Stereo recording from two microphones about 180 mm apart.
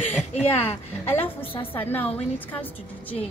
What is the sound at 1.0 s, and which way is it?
A woman's voice, 10° left (ahead or behind).